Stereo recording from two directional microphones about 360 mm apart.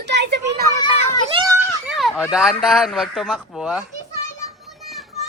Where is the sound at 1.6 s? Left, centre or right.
Centre.